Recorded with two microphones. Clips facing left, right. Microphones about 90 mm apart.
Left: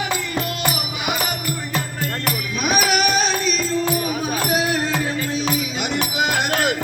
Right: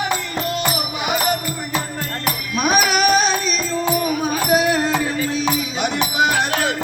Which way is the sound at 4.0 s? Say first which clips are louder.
Right 3 dB; 40° right (ahead or behind).